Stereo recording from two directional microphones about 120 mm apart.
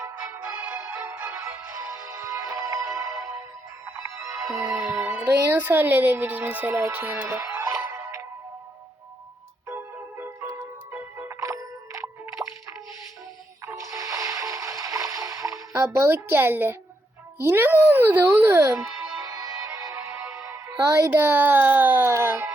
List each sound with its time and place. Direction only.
0.0 s music: 20° right (ahead or behind)
4.4 s music: 10° right (ahead or behind)
5.3 s speech: 15° right (ahead or behind)
10.6 s music: 20° right (ahead or behind)
13.7 s music: 25° right (ahead or behind)
17.4 s speech: 20° right (ahead or behind)
21.1 s a child's voice: 20° right (ahead or behind)